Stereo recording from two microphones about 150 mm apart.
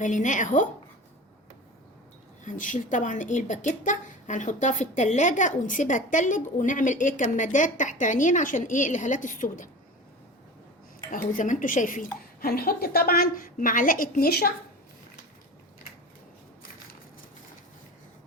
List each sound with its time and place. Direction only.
0.0 s a woman's voice: 55° left (ahead or behind)
2.4 s a woman's voice: 60° left (ahead or behind)
11.1 s a woman's voice: 60° left (ahead or behind)
12.4 s a woman's voice: 90° left